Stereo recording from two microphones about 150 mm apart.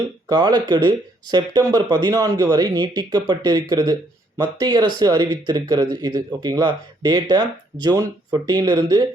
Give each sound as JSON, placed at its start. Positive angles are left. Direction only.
{"t": 0.3, "sound": "speech", "side_deg": -30}